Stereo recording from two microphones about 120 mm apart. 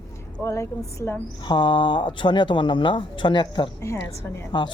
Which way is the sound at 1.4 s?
40° left (ahead or behind).